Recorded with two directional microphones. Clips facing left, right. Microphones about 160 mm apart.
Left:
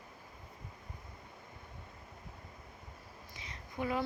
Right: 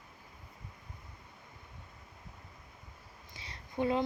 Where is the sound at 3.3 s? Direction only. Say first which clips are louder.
Right 5 dB; 30° right (ahead or behind).